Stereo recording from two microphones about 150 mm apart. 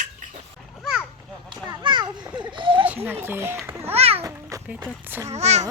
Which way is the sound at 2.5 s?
35° right (ahead or behind).